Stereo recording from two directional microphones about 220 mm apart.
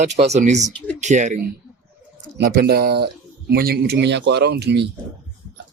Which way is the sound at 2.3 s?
45° right (ahead or behind).